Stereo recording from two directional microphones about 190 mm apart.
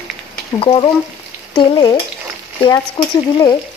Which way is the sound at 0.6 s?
25° left (ahead or behind).